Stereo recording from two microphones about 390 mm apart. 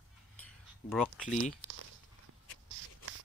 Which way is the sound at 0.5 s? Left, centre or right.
Centre.